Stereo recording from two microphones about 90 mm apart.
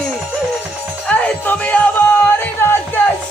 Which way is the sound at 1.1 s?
15° left (ahead or behind).